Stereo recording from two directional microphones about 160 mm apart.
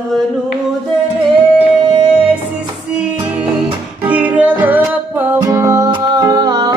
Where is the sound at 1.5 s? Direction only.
10° right (ahead or behind).